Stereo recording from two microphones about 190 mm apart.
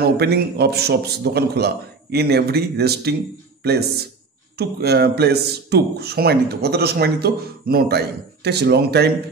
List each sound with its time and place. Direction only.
0.2 s speech: 60° right (ahead or behind)
4.6 s speech: 60° right (ahead or behind)